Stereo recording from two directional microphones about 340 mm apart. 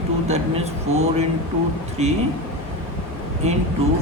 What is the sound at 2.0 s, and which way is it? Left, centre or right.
Speech, centre.